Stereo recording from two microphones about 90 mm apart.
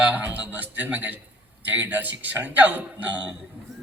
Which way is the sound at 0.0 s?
20° right (ahead or behind).